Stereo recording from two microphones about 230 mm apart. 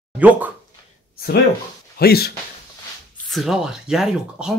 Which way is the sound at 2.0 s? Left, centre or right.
Left.